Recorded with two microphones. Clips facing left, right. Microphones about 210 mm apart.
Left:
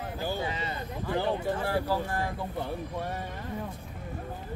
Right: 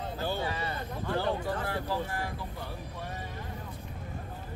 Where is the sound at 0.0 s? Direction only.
15° left (ahead or behind).